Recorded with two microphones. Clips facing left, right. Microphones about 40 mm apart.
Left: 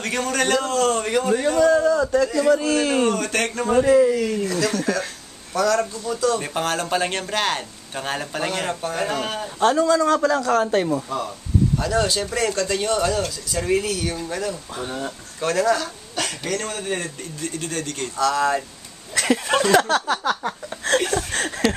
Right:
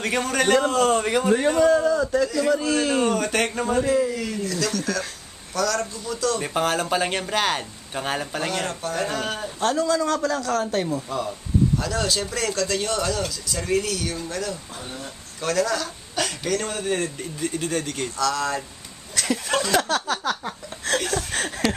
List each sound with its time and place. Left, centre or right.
0.0 s a man's voice: centre
3.7 s speech: centre
4.4 s speech: centre
14.8 s speech: left
15.4 s a man's voice: centre
17.2 s a man's voice: centre
18.2 s speech: centre
19.2 s speech: centre